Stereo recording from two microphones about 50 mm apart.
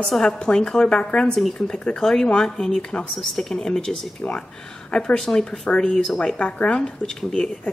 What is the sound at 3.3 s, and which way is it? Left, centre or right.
Speech, centre.